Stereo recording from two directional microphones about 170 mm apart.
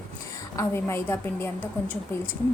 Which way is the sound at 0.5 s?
15° left (ahead or behind).